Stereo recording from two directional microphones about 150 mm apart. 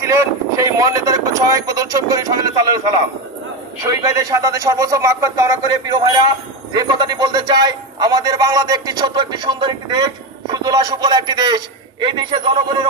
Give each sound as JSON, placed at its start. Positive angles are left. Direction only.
{"t": 0.0, "sound": "a man's voice", "side_deg": -20}
{"t": 3.8, "sound": "a man's voice", "side_deg": -20}